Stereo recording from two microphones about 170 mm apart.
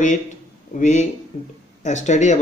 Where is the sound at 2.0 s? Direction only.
45° left (ahead or behind).